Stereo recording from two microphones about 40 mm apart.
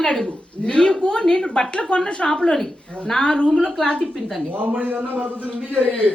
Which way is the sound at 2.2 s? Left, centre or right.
Centre.